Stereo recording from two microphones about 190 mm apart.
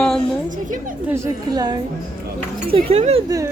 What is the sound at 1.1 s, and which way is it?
Speech, 15° right (ahead or behind).